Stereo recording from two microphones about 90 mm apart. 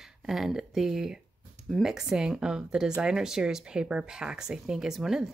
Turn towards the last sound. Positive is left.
turn(degrees=-5)  # may be behind; listen again after turning